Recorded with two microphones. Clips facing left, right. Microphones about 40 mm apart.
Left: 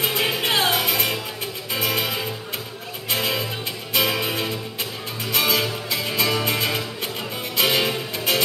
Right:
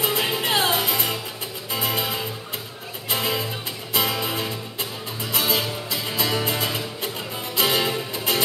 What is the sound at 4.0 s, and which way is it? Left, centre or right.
Music, left.